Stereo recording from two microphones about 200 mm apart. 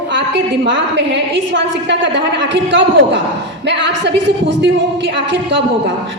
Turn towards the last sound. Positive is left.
turn(degrees=-65)  # may be behind; listen again after turning